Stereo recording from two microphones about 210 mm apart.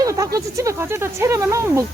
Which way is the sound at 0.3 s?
15° right (ahead or behind).